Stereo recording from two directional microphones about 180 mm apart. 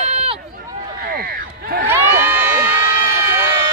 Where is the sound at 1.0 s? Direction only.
55° right (ahead or behind).